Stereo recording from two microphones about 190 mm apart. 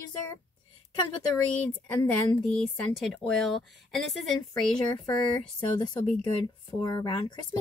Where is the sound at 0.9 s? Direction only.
20° left (ahead or behind).